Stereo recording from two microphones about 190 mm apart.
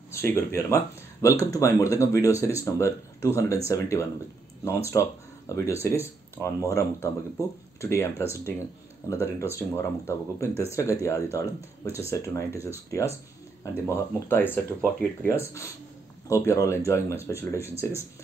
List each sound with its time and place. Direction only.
0.1 s speech: 10° left (ahead or behind)